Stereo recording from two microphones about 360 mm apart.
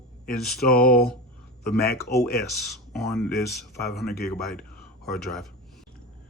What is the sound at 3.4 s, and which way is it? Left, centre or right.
Speech, left.